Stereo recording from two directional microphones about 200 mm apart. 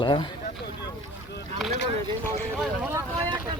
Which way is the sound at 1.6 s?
Centre (ahead or behind).